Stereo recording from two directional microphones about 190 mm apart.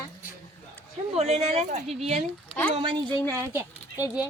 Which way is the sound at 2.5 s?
10° left (ahead or behind).